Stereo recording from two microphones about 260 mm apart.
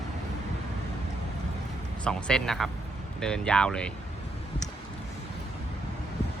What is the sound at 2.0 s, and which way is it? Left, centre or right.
Speech, centre.